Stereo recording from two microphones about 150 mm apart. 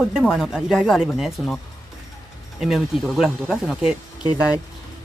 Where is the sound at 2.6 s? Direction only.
Centre (ahead or behind).